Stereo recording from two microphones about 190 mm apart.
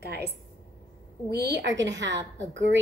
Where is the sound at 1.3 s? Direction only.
60° right (ahead or behind).